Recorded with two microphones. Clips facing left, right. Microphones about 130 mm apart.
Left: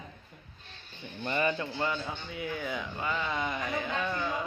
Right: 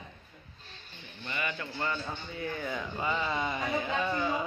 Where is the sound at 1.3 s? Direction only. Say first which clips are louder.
Left 7 dB; 35° left (ahead or behind).